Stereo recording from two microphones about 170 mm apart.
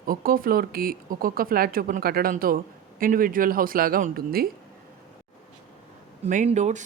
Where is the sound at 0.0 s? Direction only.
60° right (ahead or behind).